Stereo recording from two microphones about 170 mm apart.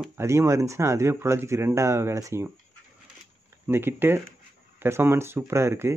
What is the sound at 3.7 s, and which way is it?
Speech, 15° right (ahead or behind).